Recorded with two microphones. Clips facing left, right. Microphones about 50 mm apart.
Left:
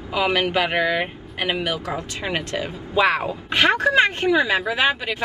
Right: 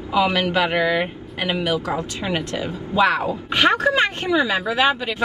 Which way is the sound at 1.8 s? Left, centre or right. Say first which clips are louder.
Right 3 dB; right.